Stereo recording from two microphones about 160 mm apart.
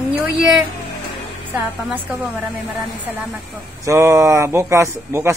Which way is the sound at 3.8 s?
20° right (ahead or behind).